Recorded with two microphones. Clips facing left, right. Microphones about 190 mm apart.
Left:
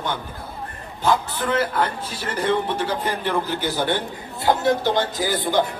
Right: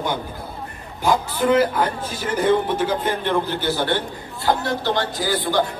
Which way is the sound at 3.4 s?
15° left (ahead or behind).